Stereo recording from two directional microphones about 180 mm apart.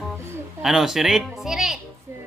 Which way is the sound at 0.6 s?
Centre (ahead or behind).